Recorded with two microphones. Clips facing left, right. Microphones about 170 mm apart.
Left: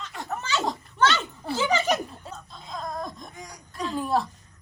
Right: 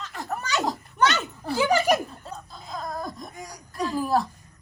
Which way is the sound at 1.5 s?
10° right (ahead or behind).